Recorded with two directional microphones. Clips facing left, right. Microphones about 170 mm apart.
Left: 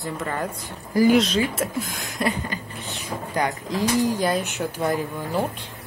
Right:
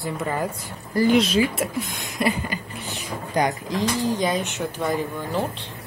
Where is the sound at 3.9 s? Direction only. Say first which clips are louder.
Left 3 dB; 10° left (ahead or behind).